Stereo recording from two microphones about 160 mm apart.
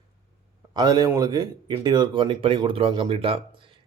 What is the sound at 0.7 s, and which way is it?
Speech, 25° right (ahead or behind).